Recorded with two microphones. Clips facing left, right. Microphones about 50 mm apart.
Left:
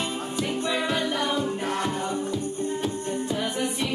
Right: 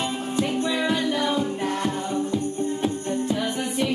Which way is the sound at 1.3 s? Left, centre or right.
Centre.